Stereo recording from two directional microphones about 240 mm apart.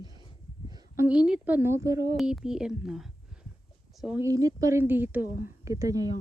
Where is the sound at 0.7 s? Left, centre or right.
Centre.